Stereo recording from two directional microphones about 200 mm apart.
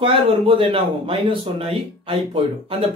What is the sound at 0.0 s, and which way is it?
Speech, 25° right (ahead or behind).